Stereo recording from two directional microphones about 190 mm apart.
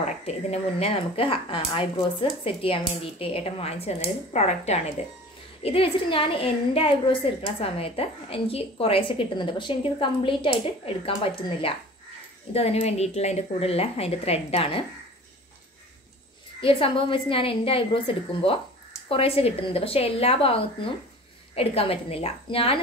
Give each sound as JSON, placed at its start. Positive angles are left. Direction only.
{"t": 0.0, "sound": "a woman's voice", "side_deg": 35}
{"t": 16.6, "sound": "a woman's voice", "side_deg": 30}